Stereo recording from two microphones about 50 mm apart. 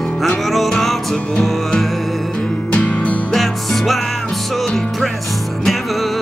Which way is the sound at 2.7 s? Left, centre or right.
Left.